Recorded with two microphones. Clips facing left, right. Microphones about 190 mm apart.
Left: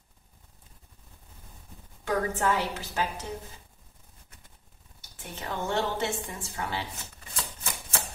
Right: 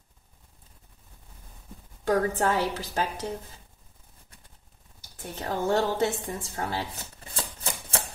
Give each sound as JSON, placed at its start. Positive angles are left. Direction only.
{"t": 2.0, "sound": "a woman's voice", "side_deg": -40}
{"t": 5.2, "sound": "a woman's voice", "side_deg": -40}
{"t": 7.3, "sound": "a sound", "side_deg": -30}